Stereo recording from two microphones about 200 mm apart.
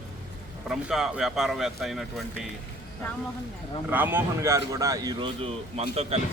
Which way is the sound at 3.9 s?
10° right (ahead or behind).